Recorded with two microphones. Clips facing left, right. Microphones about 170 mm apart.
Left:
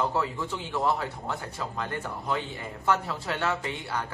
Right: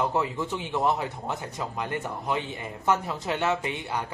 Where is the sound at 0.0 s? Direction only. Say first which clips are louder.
Right 2 dB; 20° right (ahead or behind).